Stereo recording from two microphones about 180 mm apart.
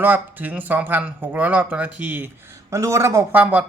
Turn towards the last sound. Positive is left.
turn(degrees=-10)  # may be behind; listen again after turning